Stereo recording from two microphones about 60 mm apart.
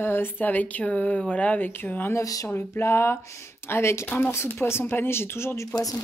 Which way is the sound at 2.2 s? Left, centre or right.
Left.